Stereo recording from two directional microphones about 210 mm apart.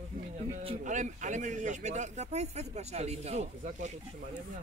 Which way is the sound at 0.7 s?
35° right (ahead or behind).